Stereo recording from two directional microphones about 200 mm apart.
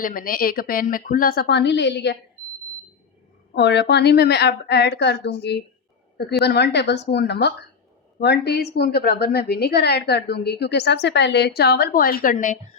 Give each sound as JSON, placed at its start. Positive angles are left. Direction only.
{"t": 0.0, "sound": "a woman's voice", "side_deg": 45}
{"t": 3.5, "sound": "a woman's voice", "side_deg": 60}